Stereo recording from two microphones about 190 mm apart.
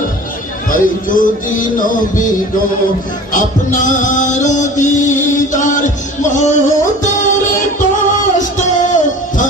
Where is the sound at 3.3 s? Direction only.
40° left (ahead or behind).